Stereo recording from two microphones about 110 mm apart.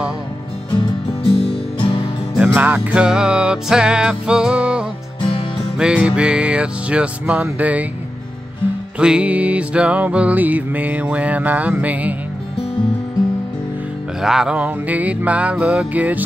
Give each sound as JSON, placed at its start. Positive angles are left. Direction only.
{"t": 1.2, "sound": "music", "side_deg": 60}
{"t": 2.3, "sound": "music", "side_deg": -15}
{"t": 8.9, "sound": "music", "side_deg": -10}
{"t": 14.2, "sound": "music", "side_deg": -5}